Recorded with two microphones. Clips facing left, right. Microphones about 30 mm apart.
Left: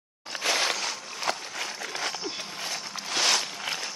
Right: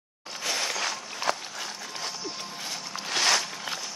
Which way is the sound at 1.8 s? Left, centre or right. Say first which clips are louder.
Left 3 dB; left.